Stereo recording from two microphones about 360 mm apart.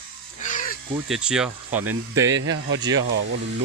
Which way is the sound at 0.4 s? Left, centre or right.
Left.